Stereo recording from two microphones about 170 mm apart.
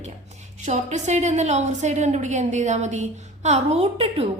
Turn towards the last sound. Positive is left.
turn(degrees=-35)  # may be behind; listen again after turning